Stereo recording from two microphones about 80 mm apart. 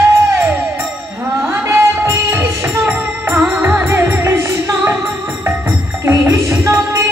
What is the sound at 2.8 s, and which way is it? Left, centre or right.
Music, centre.